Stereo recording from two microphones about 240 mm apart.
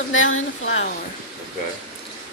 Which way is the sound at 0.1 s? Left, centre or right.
Left.